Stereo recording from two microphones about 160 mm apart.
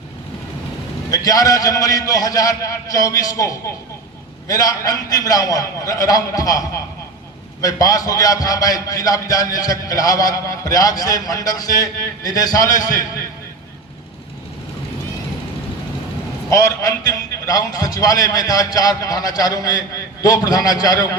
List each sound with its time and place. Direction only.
1.1 s a man's voice: 20° left (ahead or behind)
16.5 s a man's voice: 20° left (ahead or behind)